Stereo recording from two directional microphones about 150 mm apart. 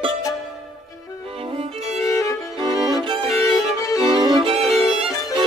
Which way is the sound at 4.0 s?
35° right (ahead or behind).